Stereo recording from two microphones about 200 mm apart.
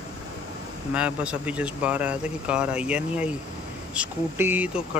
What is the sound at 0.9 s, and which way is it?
Speech, 5° right (ahead or behind).